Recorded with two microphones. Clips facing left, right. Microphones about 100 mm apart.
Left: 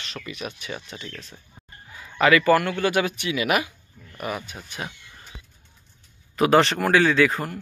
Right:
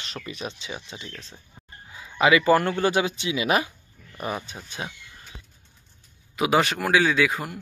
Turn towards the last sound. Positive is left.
turn(degrees=-10)  # may be behind; listen again after turning